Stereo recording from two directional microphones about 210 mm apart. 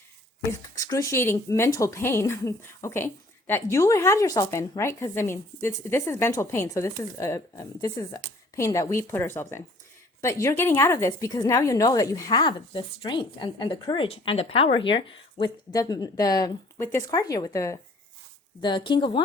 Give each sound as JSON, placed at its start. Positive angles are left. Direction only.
{"t": 0.8, "sound": "a woman's voice", "side_deg": 15}